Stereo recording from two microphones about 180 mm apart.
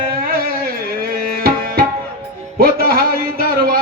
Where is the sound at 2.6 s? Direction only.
60° right (ahead or behind).